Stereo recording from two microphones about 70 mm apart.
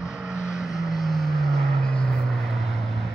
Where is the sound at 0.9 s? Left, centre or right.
Centre.